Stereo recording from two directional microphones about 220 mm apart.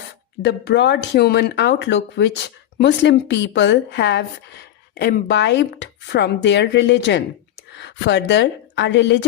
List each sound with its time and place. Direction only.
0.4 s a woman's voice: 50° left (ahead or behind)